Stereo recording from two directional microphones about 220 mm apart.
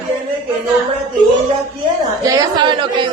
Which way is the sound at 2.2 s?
15° right (ahead or behind).